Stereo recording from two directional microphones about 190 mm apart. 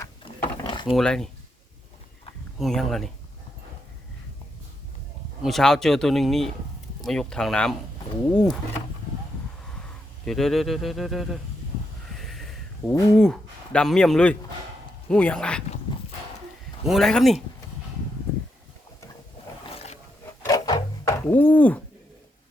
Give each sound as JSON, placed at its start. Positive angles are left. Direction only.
{"t": 0.4, "sound": "mechanisms", "side_deg": 25}
{"t": 0.9, "sound": "speech", "side_deg": 5}
{"t": 2.6, "sound": "speech", "side_deg": 0}
{"t": 5.4, "sound": "speech", "side_deg": 0}
{"t": 10.2, "sound": "speech", "side_deg": 0}
{"t": 12.1, "sound": "a sound", "side_deg": 0}
{"t": 15.1, "sound": "speech", "side_deg": 5}
{"t": 16.8, "sound": "speech", "side_deg": 0}
{"t": 19.7, "sound": "roar", "side_deg": 35}
{"t": 20.5, "sound": "music", "side_deg": 20}
{"t": 21.2, "sound": "speech", "side_deg": 10}